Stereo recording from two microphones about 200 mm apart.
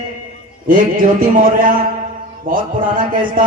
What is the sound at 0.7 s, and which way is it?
A man's voice, 45° right (ahead or behind).